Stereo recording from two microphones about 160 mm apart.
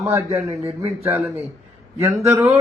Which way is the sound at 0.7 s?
40° right (ahead or behind).